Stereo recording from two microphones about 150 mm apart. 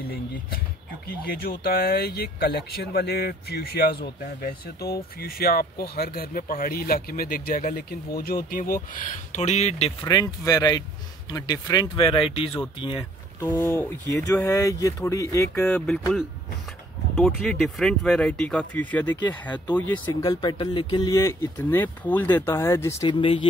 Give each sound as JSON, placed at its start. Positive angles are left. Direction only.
{"t": 0.0, "sound": "speech", "side_deg": 90}
{"t": 10.0, "sound": "speech", "side_deg": 25}
{"t": 13.4, "sound": "speech", "side_deg": 15}
{"t": 15.6, "sound": "speech", "side_deg": 5}
{"t": 17.2, "sound": "speech", "side_deg": 5}
{"t": 20.2, "sound": "speech", "side_deg": 25}
{"t": 23.0, "sound": "speech", "side_deg": 35}